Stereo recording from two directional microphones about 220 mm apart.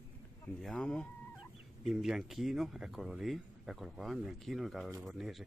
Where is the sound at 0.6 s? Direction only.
5° left (ahead or behind).